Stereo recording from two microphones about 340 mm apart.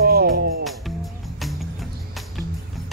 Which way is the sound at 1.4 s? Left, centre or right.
Centre.